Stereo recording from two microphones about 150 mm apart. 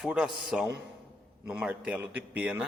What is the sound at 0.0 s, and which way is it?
A man's voice, 5° right (ahead or behind).